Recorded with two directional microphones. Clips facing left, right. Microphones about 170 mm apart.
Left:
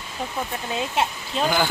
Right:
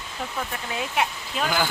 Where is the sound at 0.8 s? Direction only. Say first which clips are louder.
Left 1 dB; 25° left (ahead or behind).